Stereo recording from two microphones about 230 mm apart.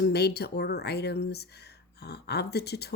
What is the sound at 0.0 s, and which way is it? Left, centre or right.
Speech, left.